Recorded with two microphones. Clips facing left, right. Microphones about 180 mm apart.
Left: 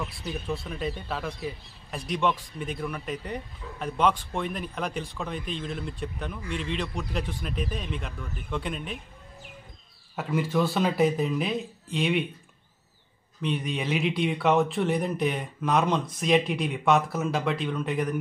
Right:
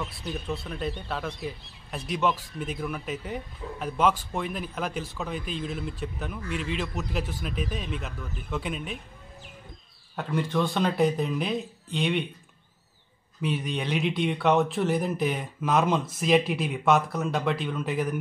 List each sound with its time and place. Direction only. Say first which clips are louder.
0.0 s speech: even; 5° left (ahead or behind)
10.1 s speech: left 1 dB; 5° left (ahead or behind)
13.4 s speech: even; centre (ahead or behind)